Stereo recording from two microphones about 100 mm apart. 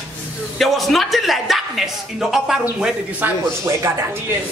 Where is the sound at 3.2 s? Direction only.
25° right (ahead or behind).